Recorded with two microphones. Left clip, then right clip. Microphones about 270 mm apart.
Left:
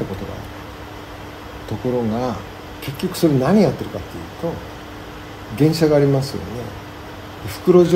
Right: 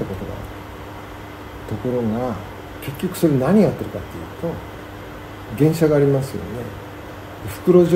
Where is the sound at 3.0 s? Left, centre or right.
Centre.